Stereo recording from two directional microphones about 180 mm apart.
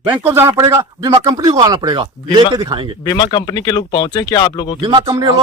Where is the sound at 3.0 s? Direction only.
25° left (ahead or behind).